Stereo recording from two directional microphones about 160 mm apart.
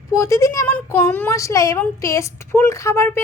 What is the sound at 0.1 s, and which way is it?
A woman's voice, 20° left (ahead or behind).